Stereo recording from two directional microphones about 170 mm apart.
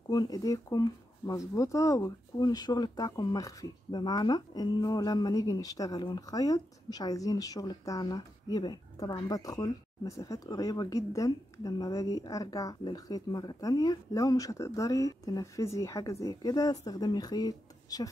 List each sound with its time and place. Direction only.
0.1 s speech: 25° left (ahead or behind)